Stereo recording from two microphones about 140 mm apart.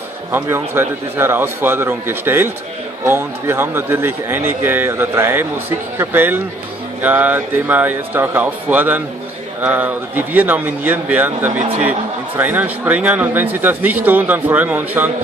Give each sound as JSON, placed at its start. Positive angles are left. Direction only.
{"t": 0.3, "sound": "speech", "side_deg": -15}